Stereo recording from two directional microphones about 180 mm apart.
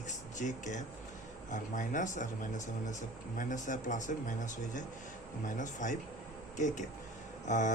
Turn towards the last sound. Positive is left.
turn(degrees=45)  # may be behind; listen again after turning